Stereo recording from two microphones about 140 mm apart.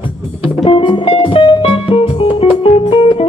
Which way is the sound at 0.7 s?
40° left (ahead or behind).